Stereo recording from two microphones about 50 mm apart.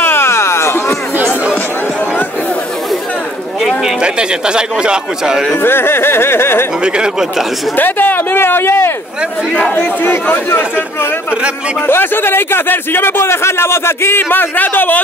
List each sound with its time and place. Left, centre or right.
0.0 s music: left
4.0 s speech: centre
5.6 s speech: left
6.8 s speech: centre
7.7 s speech: left
9.5 s speech: centre
9.8 s a man's voice: left
11.8 s speech: left